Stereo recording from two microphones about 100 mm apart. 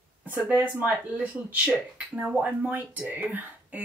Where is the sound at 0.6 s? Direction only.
15° right (ahead or behind).